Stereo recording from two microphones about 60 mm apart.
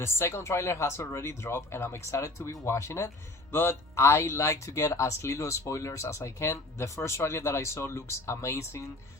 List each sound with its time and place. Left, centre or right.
0.0 s speech: left
3.5 s speech: left